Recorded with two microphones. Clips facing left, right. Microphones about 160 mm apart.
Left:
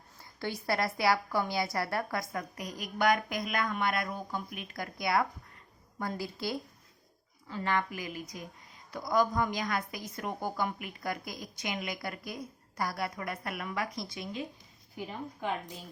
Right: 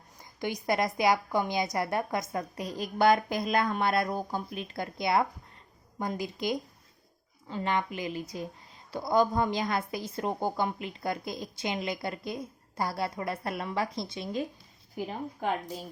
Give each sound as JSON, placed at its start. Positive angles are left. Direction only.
{"t": 0.2, "sound": "a woman's voice", "side_deg": -15}
{"t": 14.9, "sound": "a woman's voice", "side_deg": -40}